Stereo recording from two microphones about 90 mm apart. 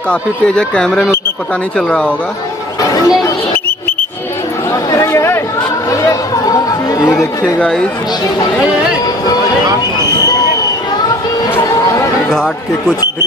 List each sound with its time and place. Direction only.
0.1 s speech: 10° left (ahead or behind)
2.8 s a sound: 40° left (ahead or behind)
4.9 s chatter: 30° left (ahead or behind)
7.4 s speech: 20° left (ahead or behind)
12.3 s speech: 5° left (ahead or behind)